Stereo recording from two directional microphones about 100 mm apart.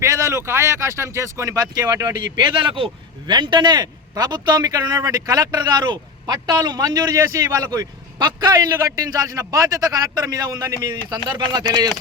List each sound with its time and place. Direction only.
0.0 s speech: 30° right (ahead or behind)
2.4 s speech: 55° right (ahead or behind)